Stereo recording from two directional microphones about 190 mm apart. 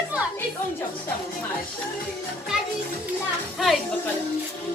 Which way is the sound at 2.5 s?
Centre (ahead or behind).